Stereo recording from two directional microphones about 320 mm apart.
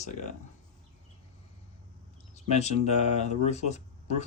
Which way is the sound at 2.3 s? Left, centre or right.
Left.